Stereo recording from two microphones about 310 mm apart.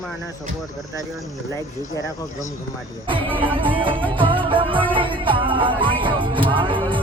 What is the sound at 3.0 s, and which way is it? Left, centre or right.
Music, centre.